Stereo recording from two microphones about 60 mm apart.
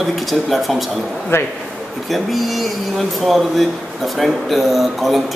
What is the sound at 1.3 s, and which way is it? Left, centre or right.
Speech, left.